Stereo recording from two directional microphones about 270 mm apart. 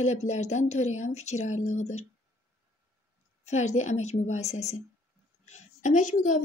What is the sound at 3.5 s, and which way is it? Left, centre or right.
Speech, left.